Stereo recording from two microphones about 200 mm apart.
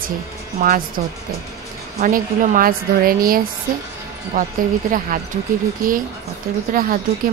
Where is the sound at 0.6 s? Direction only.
45° right (ahead or behind).